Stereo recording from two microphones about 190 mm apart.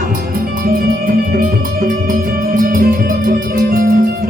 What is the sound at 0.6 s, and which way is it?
Music, 50° right (ahead or behind).